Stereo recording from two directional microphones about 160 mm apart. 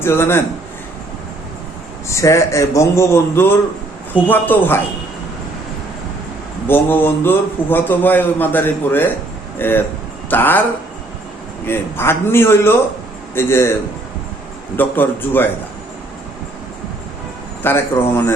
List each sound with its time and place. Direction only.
0.0 s a man's voice: 15° left (ahead or behind)
2.0 s a man's voice: 20° left (ahead or behind)
6.7 s a man's voice: 15° left (ahead or behind)
11.6 s a man's voice: 15° left (ahead or behind)
14.8 s a man's voice: 10° left (ahead or behind)
17.6 s a man's voice: 15° left (ahead or behind)